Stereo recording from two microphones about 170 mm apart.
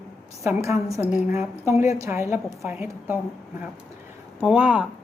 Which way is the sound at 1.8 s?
15° right (ahead or behind).